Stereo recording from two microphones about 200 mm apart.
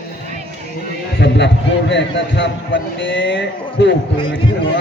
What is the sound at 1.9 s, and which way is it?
Speech, 60° left (ahead or behind).